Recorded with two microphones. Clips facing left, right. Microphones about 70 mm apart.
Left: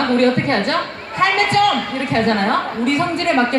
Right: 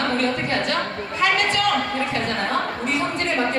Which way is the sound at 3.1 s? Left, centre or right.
Left.